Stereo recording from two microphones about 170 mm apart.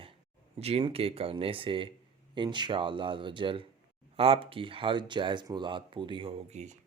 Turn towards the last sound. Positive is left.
turn(degrees=-40)  # may be behind; listen again after turning